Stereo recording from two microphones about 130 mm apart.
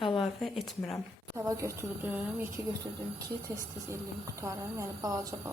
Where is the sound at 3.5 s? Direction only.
25° right (ahead or behind).